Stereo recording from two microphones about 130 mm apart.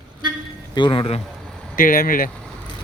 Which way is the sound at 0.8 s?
40° left (ahead or behind).